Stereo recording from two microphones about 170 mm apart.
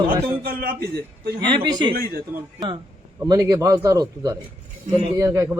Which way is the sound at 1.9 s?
60° right (ahead or behind).